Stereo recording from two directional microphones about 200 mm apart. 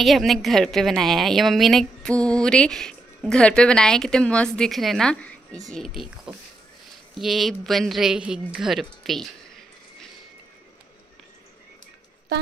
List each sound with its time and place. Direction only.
0.0 s a woman's voice: centre (ahead or behind)